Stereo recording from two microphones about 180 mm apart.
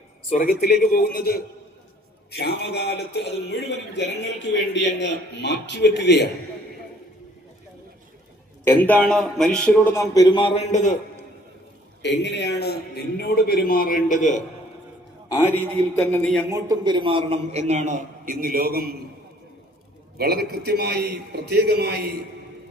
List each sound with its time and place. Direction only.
0.3 s a man's voice: 50° left (ahead or behind); by 6.3 s 70° left (ahead or behind)
8.6 s a man's voice: 10° left (ahead or behind); by 10.9 s 40° left (ahead or behind)
12.0 s a man's voice: 75° left (ahead or behind); by 14.4 s 45° left (ahead or behind)
15.3 s a man's voice: 10° left (ahead or behind)
16.5 s a man's voice: 20° right (ahead or behind); by 18.9 s 55° right (ahead or behind)
20.1 s a man's voice: 60° right (ahead or behind)